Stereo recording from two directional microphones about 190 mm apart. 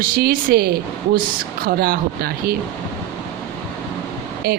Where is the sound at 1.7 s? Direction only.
50° right (ahead or behind).